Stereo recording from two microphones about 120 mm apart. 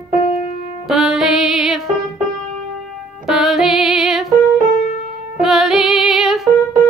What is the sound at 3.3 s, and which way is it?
Music, 5° right (ahead or behind).